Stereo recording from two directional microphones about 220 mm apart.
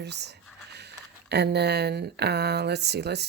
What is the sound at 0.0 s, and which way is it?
Speech, 50° right (ahead or behind).